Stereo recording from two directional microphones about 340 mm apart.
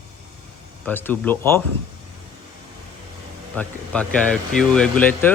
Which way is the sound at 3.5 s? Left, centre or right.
Centre.